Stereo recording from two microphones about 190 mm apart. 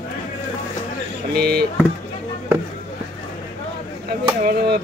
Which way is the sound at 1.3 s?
55° right (ahead or behind).